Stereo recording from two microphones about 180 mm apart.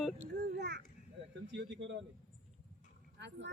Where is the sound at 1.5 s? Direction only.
85° right.